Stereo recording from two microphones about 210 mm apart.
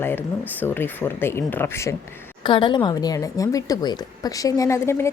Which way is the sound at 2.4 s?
20° left (ahead or behind).